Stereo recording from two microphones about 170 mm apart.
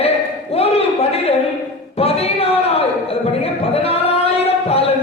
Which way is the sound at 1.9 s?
35° left (ahead or behind).